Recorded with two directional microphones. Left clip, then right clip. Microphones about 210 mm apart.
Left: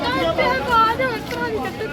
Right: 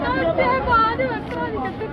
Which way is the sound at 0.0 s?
60° left (ahead or behind).